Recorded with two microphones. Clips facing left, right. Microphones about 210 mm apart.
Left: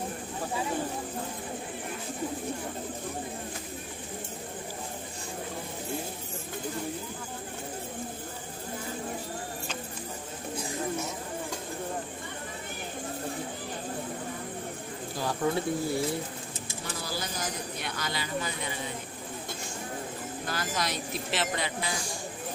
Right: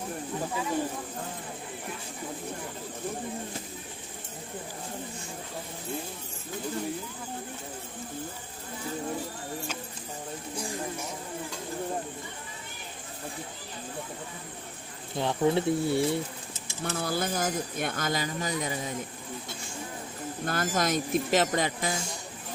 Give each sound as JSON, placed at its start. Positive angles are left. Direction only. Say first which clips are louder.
{"t": 15.1, "sound": "speech", "louder": "right 4 dB", "side_deg": -25}
{"t": 16.8, "sound": "speech", "louder": "right 7 dB", "side_deg": -55}
{"t": 20.4, "sound": "speech", "louder": "right 5 dB", "side_deg": -50}